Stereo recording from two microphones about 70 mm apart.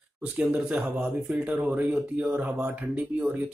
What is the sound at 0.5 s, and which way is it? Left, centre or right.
Speech, right.